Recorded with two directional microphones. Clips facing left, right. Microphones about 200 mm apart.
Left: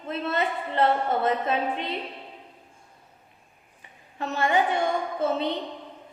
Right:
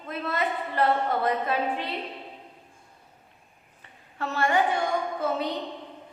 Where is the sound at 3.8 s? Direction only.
20° left (ahead or behind).